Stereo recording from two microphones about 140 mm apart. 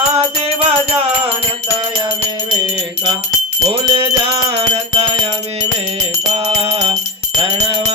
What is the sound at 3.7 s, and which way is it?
Music, 40° right (ahead or behind).